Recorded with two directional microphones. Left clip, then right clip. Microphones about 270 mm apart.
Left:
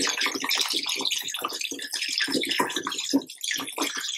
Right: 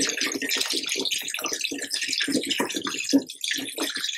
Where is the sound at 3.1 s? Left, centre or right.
Centre.